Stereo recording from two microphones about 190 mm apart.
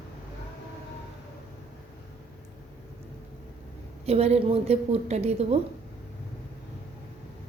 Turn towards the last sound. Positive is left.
turn(degrees=-35)  # may be behind; listen again after turning